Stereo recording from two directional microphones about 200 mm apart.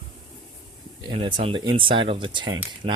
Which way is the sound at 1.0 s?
25° right (ahead or behind).